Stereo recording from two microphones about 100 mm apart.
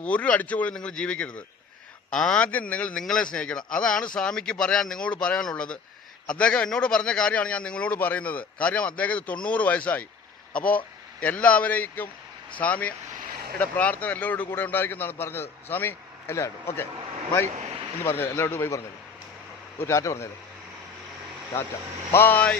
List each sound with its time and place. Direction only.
0.0 s a man's voice: 15° left (ahead or behind)
18.0 s a man's voice: 20° left (ahead or behind)
19.8 s a man's voice: 30° left (ahead or behind)
22.1 s a man's voice: 20° left (ahead or behind)